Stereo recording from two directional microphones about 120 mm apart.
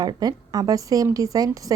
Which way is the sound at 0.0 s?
35° right (ahead or behind).